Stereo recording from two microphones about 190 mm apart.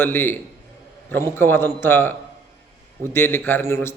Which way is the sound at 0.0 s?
10° left (ahead or behind).